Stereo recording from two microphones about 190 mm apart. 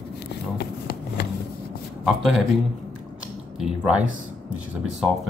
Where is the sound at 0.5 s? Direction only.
60° left (ahead or behind).